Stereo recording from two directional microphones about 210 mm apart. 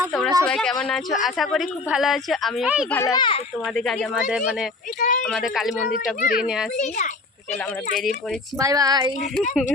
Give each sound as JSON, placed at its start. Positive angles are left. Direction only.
{"t": 0.1, "sound": "speech", "side_deg": 0}
{"t": 2.9, "sound": "a child's voice", "side_deg": 15}
{"t": 3.8, "sound": "speech", "side_deg": 0}
{"t": 4.9, "sound": "a child's voice", "side_deg": 40}
{"t": 5.2, "sound": "speech", "side_deg": 0}
{"t": 6.2, "sound": "a child's voice", "side_deg": 40}
{"t": 8.5, "sound": "speech", "side_deg": -15}